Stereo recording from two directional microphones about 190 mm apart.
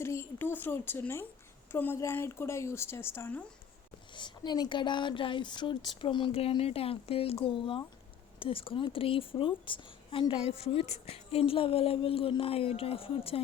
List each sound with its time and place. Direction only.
0.0 s a woman's voice: 15° left (ahead or behind)
4.1 s a woman's voice: 25° left (ahead or behind)